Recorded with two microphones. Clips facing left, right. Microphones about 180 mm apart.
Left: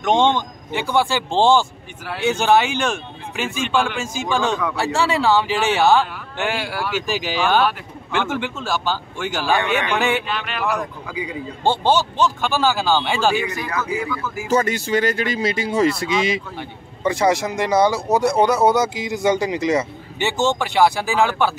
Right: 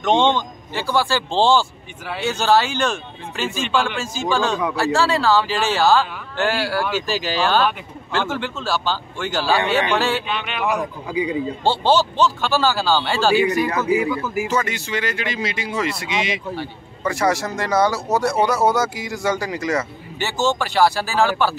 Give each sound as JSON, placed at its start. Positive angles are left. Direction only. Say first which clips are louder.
{"t": 0.0, "sound": "speech", "louder": "even", "side_deg": 10}
{"t": 3.6, "sound": "speech", "louder": "left 1 dB", "side_deg": 0}
{"t": 4.2, "sound": "speech", "louder": "right 1 dB", "side_deg": 15}
{"t": 10.2, "sound": "speech", "louder": "right 1 dB", "side_deg": 0}
{"t": 11.1, "sound": "a man's voice", "louder": "right 6 dB", "side_deg": -25}
{"t": 11.6, "sound": "speech", "louder": "even", "side_deg": 15}
{"t": 13.9, "sound": "speech", "louder": "right 5 dB", "side_deg": -15}
{"t": 14.5, "sound": "speech", "louder": "left 4 dB", "side_deg": 40}
{"t": 16.5, "sound": "speech", "louder": "right 3 dB", "side_deg": 20}